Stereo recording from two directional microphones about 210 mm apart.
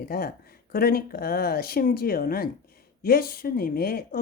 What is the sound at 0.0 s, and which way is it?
Speech, 45° left (ahead or behind).